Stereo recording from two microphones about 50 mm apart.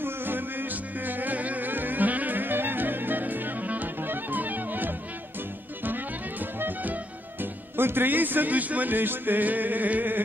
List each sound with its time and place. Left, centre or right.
0.0 s music: right
6.4 s music: right
7.7 s speech: right